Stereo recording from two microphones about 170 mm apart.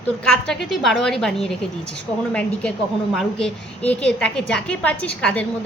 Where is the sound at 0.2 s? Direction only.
5° left (ahead or behind).